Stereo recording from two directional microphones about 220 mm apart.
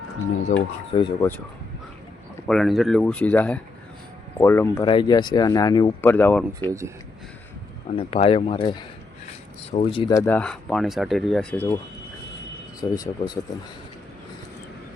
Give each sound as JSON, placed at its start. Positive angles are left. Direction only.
{"t": 0.9, "sound": "speech", "side_deg": 20}
{"t": 2.5, "sound": "speech", "side_deg": 0}
{"t": 6.7, "sound": "speech", "side_deg": -15}
{"t": 7.9, "sound": "speech", "side_deg": 25}
{"t": 12.8, "sound": "speech", "side_deg": 15}